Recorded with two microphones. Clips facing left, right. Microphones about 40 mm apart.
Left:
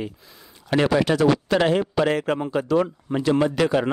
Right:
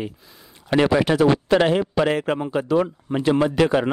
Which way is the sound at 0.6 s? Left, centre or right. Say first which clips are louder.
Right 2 dB; centre.